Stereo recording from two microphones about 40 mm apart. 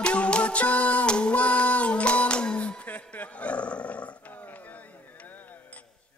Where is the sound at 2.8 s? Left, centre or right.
Left.